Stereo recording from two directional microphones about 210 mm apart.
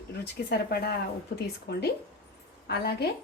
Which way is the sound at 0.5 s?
45° left (ahead or behind).